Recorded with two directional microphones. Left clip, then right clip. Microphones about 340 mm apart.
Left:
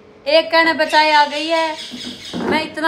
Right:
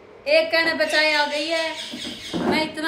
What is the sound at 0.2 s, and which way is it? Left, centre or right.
A woman's voice, centre.